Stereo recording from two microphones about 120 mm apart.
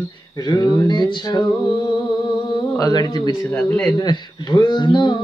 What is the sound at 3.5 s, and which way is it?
Speech, 15° left (ahead or behind).